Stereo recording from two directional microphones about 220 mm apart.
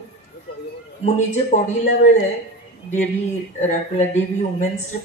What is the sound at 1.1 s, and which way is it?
Speech, 35° left (ahead or behind).